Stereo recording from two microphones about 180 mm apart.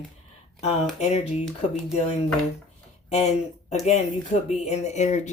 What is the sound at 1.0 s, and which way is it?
Speech, 35° left (ahead or behind).